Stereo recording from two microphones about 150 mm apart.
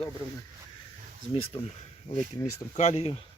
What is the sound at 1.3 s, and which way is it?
Speech, 35° left (ahead or behind).